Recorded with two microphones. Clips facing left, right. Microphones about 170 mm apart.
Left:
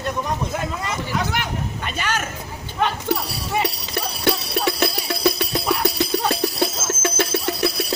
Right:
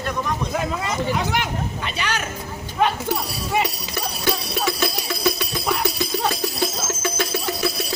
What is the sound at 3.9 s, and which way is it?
Music, 65° left (ahead or behind).